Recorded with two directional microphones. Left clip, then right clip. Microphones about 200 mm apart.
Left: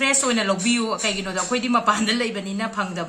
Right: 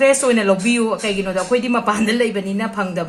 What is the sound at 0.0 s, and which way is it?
Speech, 30° right (ahead or behind).